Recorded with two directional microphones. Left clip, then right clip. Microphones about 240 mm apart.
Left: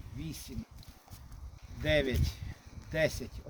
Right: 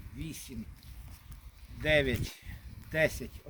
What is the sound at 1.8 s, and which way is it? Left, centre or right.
Speech, centre.